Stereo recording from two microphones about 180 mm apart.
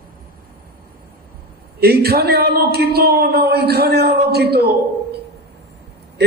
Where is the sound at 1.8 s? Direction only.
60° right (ahead or behind).